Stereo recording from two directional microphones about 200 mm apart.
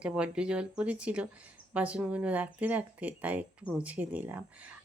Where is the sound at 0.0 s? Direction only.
5° right (ahead or behind).